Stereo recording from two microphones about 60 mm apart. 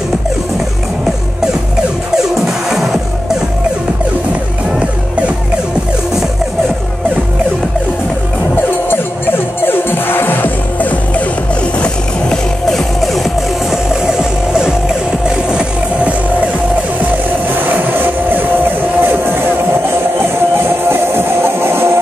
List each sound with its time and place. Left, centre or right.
2.4 s music: centre
8.9 s music: left
11.8 s music: centre
14.0 s music: centre
17.6 s music: right
20.9 s music: right